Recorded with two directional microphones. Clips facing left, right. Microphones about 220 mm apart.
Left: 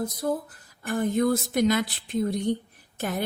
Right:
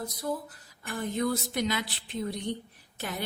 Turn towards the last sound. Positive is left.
turn(degrees=50)  # may be behind; listen again after turning